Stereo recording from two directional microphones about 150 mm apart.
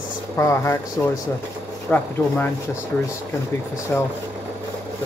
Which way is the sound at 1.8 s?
10° left (ahead or behind).